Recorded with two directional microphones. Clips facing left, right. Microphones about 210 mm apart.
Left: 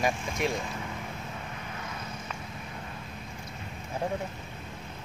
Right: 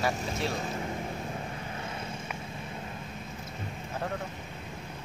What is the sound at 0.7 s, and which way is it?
Vehicle, 35° right (ahead or behind).